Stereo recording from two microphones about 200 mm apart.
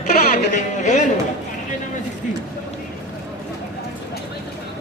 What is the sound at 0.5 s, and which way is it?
Speech, 35° left (ahead or behind).